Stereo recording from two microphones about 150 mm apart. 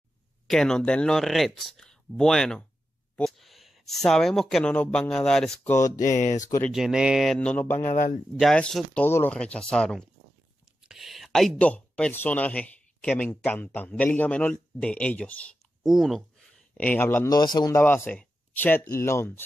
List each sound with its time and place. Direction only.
0.5 s speech: 5° left (ahead or behind)
3.2 s a sound: centre (ahead or behind)
4.1 s speech: 5° left (ahead or behind)
6.1 s speech: 55° left (ahead or behind)
6.7 s speech: 5° right (ahead or behind)
7.3 s speech: 10° left (ahead or behind)
7.8 s speech: 50° left (ahead or behind)
8.4 s speech: centre (ahead or behind)
15.8 s speech: centre (ahead or behind)
16.7 s speech: 10° left (ahead or behind)